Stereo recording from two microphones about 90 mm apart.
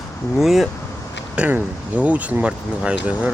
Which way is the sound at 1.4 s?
15° right (ahead or behind).